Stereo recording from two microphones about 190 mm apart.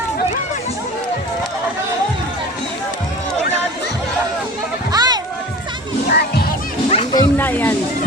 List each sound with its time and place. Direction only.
4.9 s music: 20° right (ahead or behind)
6.1 s music: 55° left (ahead or behind)
6.9 s music: 25° left (ahead or behind)
7.3 s a sound: 10° left (ahead or behind)